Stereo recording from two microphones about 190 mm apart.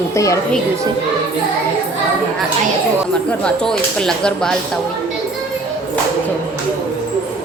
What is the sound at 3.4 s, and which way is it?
A woman's voice, 5° left (ahead or behind).